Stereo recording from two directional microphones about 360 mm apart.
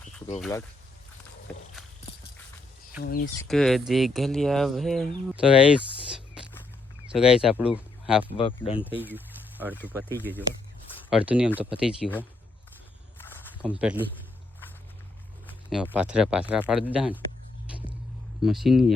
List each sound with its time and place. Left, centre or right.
0.3 s speech: centre
1.5 s walk: centre
3.0 s speech: left
3.3 s speech: centre
7.1 s speech: centre
8.4 s speech: centre
9.0 s speech: centre
13.1 s snake: centre
15.4 s speech: centre
18.4 s speech: centre